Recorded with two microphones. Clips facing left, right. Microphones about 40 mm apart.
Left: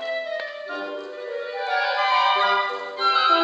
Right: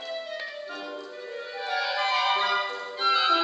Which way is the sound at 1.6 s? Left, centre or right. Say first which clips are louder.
Left 5 dB; centre.